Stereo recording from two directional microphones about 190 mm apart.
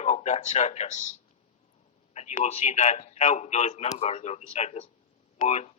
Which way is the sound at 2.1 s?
35° left (ahead or behind).